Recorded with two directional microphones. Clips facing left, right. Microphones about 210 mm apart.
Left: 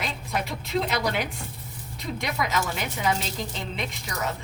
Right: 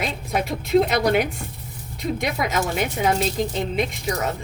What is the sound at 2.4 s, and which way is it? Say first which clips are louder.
Speech: right 3 dB; 50° right (ahead or behind).